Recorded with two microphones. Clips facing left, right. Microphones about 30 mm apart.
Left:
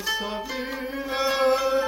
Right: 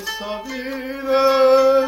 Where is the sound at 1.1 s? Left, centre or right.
Right.